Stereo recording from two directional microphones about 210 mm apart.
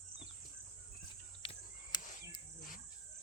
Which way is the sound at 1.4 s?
25° left (ahead or behind).